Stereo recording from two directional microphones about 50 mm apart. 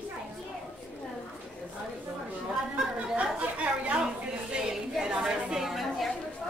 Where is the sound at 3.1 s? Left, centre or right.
Right.